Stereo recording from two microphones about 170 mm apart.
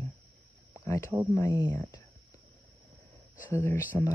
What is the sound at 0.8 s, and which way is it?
Speech, 15° left (ahead or behind).